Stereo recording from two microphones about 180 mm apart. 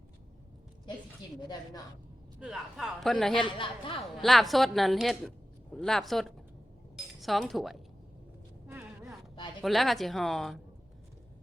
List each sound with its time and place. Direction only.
2.4 s a woman's voice: 5° right (ahead or behind)
3.3 s speech: 30° left (ahead or behind)
4.2 s a woman's voice: centre (ahead or behind)
6.9 s chink: centre (ahead or behind)
8.6 s a sound: 10° right (ahead or behind)
9.6 s a woman's voice: centre (ahead or behind)